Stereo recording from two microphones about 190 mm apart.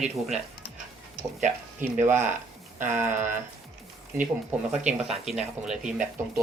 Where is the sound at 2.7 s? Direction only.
40° right (ahead or behind).